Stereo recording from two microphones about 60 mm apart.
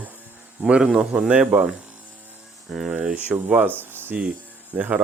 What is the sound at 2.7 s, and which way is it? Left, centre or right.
Speech, centre.